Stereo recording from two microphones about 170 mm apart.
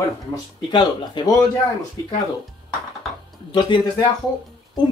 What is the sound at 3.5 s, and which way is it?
Speech, 25° left (ahead or behind).